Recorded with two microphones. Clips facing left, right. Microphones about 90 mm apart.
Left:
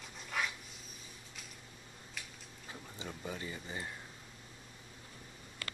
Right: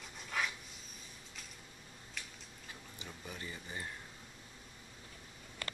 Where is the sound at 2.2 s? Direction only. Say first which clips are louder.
Even; centre (ahead or behind).